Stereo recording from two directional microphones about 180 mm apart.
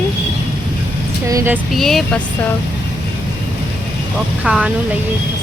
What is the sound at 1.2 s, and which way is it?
Speech, 15° right (ahead or behind).